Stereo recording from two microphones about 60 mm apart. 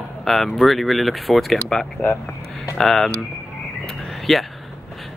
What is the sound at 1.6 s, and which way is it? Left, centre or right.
Speech, centre.